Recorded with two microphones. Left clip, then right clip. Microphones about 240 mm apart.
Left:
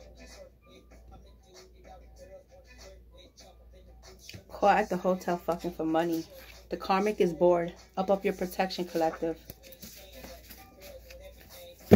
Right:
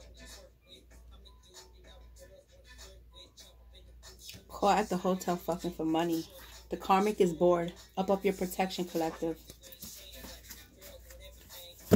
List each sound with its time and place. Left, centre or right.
4.9 s speech: centre
5.5 s speech: centre